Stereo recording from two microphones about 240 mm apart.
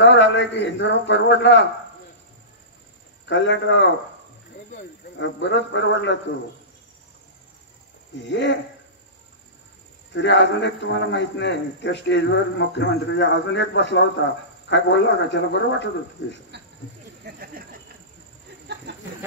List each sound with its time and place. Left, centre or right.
0.0 s a man's voice: left
3.3 s a man's voice: left
8.3 s a man's voice: left
10.1 s a man's voice: left
16.5 s a sound: right
18.9 s chicken: right